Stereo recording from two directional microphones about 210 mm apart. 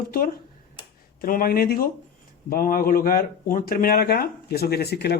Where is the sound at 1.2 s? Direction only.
45° left (ahead or behind).